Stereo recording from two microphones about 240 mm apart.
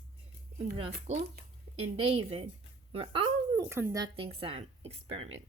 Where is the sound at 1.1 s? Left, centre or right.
Right.